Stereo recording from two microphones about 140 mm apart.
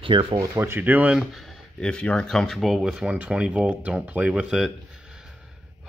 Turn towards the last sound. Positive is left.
turn(degrees=-5)  # may be behind; listen again after turning